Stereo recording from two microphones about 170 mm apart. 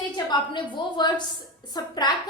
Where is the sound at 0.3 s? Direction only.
25° left (ahead or behind).